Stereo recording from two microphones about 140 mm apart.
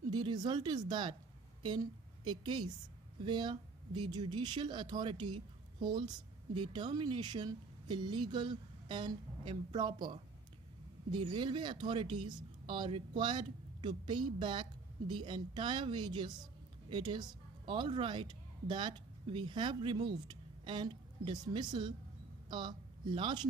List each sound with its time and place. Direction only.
0.1 s a woman's voice: 30° right (ahead or behind)